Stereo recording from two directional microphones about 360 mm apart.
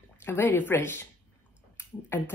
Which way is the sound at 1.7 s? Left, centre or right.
Centre.